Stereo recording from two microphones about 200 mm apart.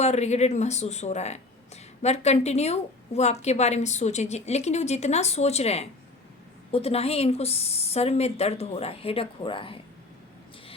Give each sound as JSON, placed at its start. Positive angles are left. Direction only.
{"t": 0.0, "sound": "a woman's voice", "side_deg": 35}